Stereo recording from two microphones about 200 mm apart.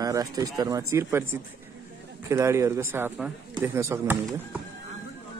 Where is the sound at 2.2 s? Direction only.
15° right (ahead or behind).